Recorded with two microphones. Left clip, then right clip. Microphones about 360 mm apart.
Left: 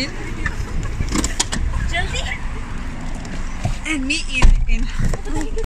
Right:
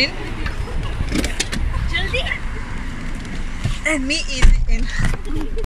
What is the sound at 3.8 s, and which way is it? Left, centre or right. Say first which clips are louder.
Speech: right 2 dB; centre.